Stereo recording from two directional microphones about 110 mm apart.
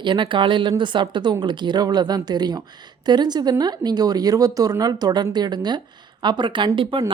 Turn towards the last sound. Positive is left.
turn(degrees=-55)  # may be behind; listen again after turning